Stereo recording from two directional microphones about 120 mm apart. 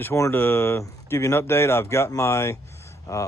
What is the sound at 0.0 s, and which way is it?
Speech, 20° left (ahead or behind).